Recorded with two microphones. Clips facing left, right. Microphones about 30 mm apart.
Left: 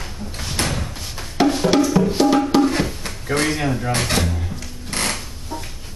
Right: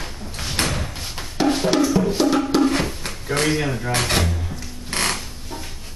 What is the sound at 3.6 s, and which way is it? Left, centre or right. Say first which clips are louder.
Speech: left 2 dB; centre.